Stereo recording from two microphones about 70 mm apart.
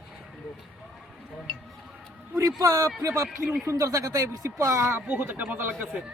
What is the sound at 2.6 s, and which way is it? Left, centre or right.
A man's voice, right.